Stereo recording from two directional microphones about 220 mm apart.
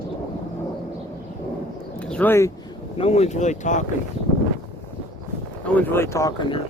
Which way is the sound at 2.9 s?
25° left (ahead or behind).